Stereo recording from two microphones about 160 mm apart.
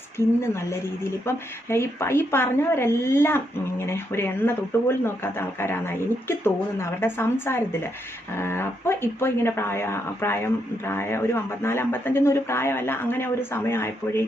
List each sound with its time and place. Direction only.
0.2 s speech: 15° left (ahead or behind)